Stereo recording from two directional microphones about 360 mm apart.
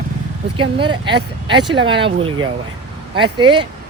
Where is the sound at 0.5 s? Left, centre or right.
Centre.